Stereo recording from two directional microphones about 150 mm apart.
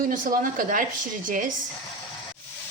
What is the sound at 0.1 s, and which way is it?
Speech, 65° right (ahead or behind).